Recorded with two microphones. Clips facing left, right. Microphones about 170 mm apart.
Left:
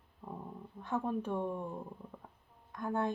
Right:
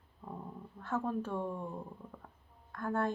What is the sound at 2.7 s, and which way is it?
Speech, 15° left (ahead or behind).